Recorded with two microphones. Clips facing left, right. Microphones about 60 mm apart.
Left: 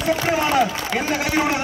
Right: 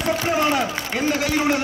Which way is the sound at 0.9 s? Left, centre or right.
Centre.